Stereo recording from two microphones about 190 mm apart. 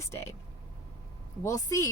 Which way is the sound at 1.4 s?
15° left (ahead or behind).